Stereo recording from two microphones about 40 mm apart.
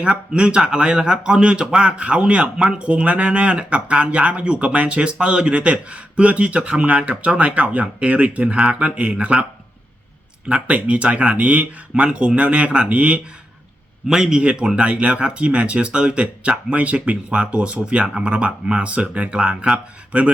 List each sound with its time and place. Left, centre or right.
0.1 s speech: right
8.5 s speech: right
8.8 s speech: right
10.7 s speech: right
12.0 s speech: right
14.1 s speech: centre
14.8 s speech: right